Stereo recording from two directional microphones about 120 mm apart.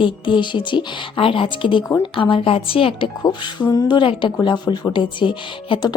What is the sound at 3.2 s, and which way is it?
A woman's voice, 30° left (ahead or behind).